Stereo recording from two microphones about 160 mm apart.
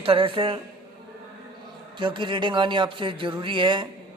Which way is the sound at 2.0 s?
30° right (ahead or behind).